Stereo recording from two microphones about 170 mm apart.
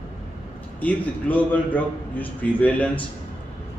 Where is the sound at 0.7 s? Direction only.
10° left (ahead or behind).